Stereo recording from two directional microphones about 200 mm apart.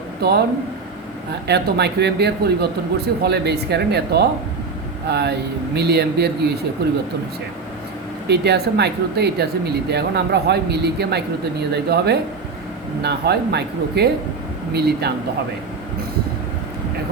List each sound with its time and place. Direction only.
0.2 s speech: 50° right (ahead or behind)
1.5 s speech: 55° right (ahead or behind)
8.3 s speech: 55° right (ahead or behind)